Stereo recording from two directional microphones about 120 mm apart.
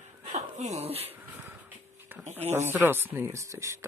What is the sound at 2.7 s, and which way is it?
Speech, 15° right (ahead or behind).